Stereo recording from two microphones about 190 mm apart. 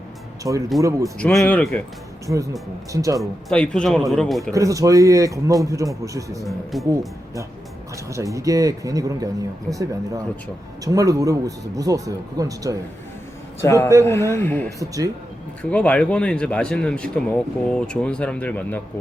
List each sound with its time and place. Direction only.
0.4 s a man's voice: 20° right (ahead or behind)
1.2 s speech: 5° left (ahead or behind)
2.2 s a man's voice: 15° right (ahead or behind)
3.2 s speech: 5° left (ahead or behind)
4.5 s a man's voice: 15° right (ahead or behind)
6.4 s speech: centre (ahead or behind)
8.1 s a man's voice: 15° right (ahead or behind)
10.8 s a man's voice: 20° right (ahead or behind)
13.6 s speech: 15° left (ahead or behind)
14.8 s a man's voice: 15° right (ahead or behind)
15.7 s speech: 5° left (ahead or behind)